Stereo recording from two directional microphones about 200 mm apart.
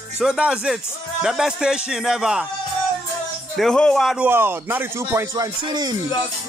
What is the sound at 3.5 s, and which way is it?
Speech, 5° left (ahead or behind).